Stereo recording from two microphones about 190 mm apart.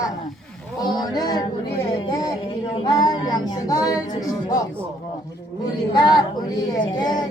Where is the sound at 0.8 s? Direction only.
20° left (ahead or behind).